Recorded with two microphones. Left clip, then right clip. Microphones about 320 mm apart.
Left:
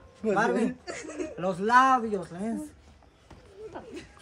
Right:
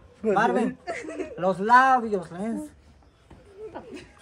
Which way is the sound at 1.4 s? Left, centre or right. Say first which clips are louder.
Right 3 dB; centre.